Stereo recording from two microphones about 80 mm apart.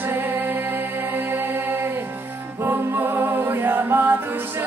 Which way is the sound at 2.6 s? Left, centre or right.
Right.